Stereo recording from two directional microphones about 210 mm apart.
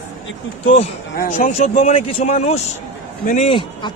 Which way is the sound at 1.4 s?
35° left (ahead or behind).